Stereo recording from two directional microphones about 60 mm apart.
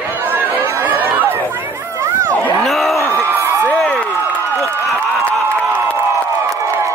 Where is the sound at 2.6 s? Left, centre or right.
Centre.